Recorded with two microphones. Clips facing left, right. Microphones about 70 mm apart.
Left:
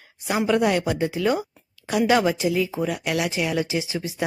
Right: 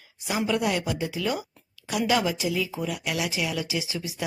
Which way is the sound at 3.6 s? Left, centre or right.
Left.